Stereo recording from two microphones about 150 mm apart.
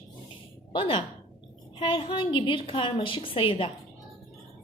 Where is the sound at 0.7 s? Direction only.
35° left (ahead or behind).